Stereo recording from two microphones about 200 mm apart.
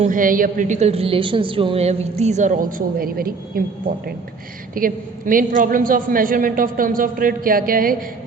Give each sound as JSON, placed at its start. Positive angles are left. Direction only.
{"t": 0.0, "sound": "a woman's voice", "side_deg": -40}
{"t": 4.7, "sound": "a woman's voice", "side_deg": -45}